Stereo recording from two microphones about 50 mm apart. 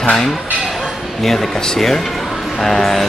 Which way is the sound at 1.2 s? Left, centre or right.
Centre.